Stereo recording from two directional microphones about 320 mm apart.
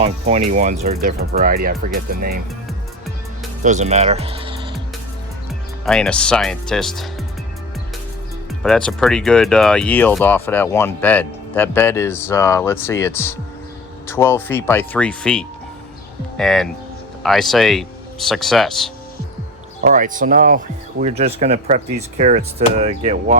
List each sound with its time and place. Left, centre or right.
0.0 s speech: centre
3.6 s speech: right
5.8 s speech: centre
8.6 s speech: centre
19.8 s speech: right